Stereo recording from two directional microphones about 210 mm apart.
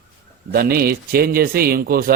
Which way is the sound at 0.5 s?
45° right (ahead or behind).